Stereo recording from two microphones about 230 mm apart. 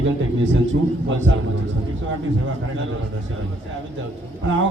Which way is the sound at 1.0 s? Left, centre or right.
Right.